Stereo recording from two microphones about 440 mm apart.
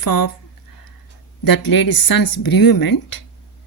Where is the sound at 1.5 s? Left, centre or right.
Left.